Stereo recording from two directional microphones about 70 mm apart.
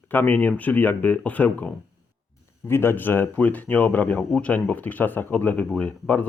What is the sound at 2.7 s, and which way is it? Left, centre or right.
Speech, left.